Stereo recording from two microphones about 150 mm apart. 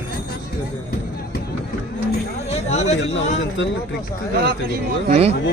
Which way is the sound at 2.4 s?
50° left (ahead or behind).